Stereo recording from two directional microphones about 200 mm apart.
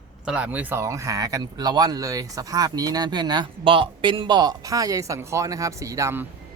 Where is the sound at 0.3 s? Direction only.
5° right (ahead or behind).